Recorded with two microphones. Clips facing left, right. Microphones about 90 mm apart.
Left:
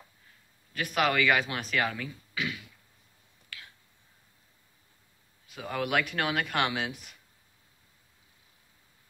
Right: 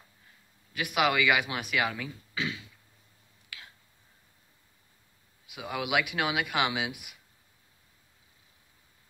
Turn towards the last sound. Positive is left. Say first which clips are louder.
# even
turn(degrees=-10)  # may be behind; listen again after turning